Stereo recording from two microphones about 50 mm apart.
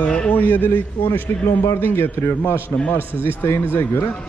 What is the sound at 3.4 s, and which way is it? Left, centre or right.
Speech, left.